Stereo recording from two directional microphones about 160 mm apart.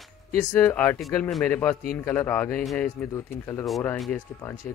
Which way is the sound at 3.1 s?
20° left (ahead or behind).